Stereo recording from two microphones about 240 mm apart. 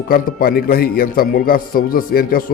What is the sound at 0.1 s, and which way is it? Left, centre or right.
A man's voice, left.